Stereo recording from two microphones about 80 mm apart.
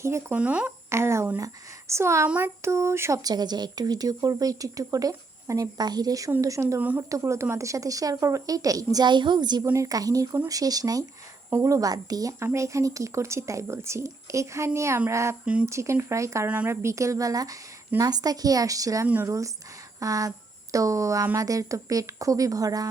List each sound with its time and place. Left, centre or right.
0.0 s speech: right
0.3 s speech: centre
0.9 s speech: right
3.2 s speech: right
6.7 s speech: right
7.1 s speech: right
9.0 s speech: right
9.7 s speech: right
12.4 s speech: right